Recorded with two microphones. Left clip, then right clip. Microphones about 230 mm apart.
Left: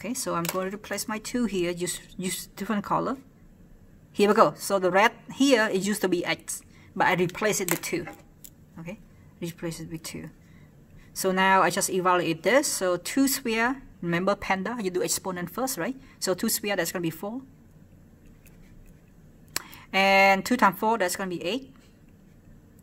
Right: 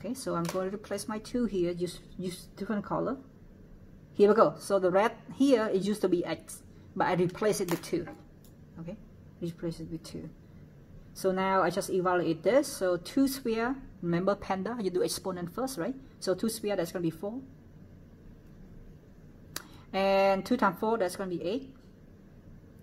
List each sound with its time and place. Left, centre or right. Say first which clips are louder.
0.0 s speech: left 4 dB; left
4.2 s speech: left 2 dB; left
9.4 s speech: left 2 dB; left
19.5 s speech: left 8 dB; left